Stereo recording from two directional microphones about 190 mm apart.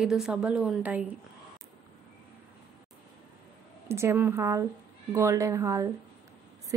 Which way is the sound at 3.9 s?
15° right (ahead or behind).